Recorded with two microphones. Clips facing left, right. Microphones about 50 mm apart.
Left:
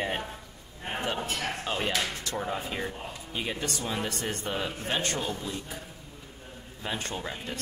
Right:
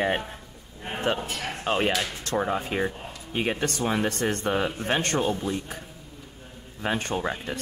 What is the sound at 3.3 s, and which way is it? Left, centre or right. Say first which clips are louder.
Speech: right 7 dB; right.